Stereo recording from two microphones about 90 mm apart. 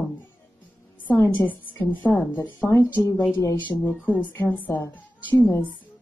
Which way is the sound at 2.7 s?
35° left (ahead or behind).